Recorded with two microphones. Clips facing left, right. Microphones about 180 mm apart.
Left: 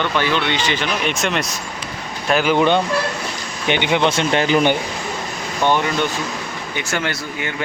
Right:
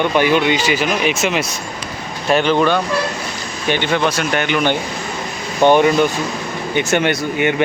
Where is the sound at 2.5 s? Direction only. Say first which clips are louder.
Even; 20° left (ahead or behind).